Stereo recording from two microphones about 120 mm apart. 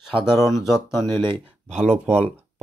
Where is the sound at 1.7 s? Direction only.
70° right (ahead or behind).